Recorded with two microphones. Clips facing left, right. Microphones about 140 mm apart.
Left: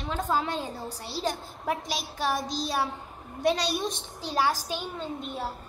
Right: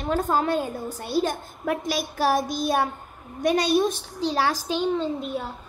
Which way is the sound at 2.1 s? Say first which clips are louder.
Right 7 dB; 65° right (ahead or behind).